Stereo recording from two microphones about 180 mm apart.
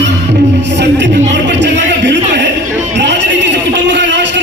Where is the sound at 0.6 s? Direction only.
75° right (ahead or behind).